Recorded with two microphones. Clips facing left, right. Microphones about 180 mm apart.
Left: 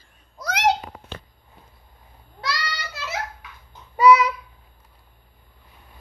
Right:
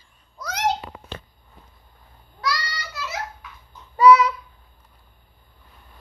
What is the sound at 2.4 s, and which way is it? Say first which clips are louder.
Child singing: right 2 dB; 25° left (ahead or behind).